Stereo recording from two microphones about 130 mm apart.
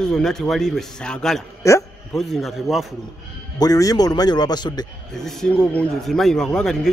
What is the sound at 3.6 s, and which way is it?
Speech, 30° left (ahead or behind).